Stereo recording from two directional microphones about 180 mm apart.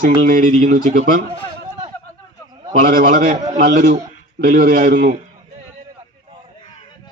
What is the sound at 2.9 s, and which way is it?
A man's voice, 50° right (ahead or behind).